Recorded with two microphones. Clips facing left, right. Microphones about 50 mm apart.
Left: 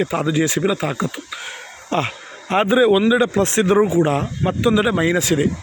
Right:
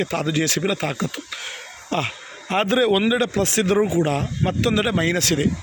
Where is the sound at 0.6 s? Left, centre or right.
Centre.